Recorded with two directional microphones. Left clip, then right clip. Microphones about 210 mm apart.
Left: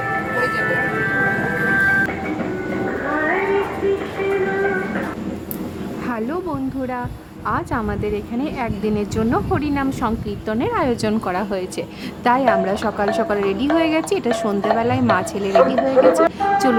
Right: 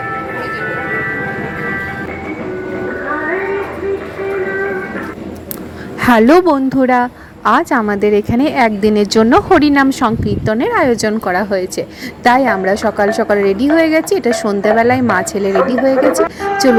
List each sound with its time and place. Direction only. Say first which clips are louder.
6.0 s a woman's voice: right 17 dB; 40° right (ahead or behind); by 16.0 s 20° right (ahead or behind)